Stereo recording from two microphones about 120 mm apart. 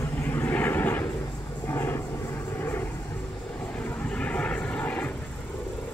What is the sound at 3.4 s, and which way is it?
Vehicle, 5° left (ahead or behind).